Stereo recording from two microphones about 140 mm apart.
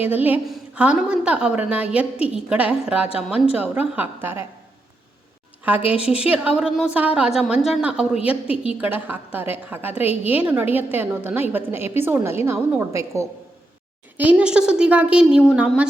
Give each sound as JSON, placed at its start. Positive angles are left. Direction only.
{"t": 0.0, "sound": "a woman's voice", "side_deg": -10}
{"t": 5.6, "sound": "a woman's voice", "side_deg": -10}
{"t": 9.9, "sound": "a woman's voice", "side_deg": 45}
{"t": 10.2, "sound": "a woman's voice", "side_deg": -10}
{"t": 14.2, "sound": "a woman's voice", "side_deg": -10}